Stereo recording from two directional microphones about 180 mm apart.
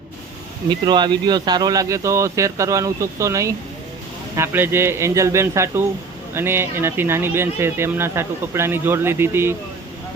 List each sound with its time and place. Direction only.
0.7 s speech: 25° right (ahead or behind)